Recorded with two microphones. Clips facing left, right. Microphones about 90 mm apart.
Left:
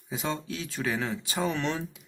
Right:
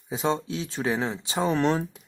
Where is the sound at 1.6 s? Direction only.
40° right (ahead or behind).